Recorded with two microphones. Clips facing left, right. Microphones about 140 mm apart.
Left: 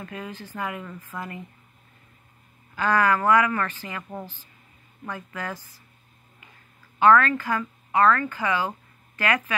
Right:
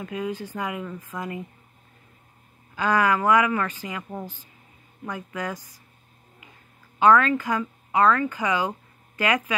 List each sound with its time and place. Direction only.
0.0 s speech: 15° right (ahead or behind)
2.7 s speech: 15° right (ahead or behind)
7.0 s speech: 15° right (ahead or behind)